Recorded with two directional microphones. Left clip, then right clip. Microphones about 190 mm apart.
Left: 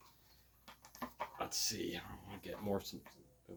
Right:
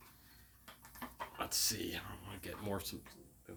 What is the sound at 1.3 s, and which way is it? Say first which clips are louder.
Speech: right 4 dB; 20° right (ahead or behind).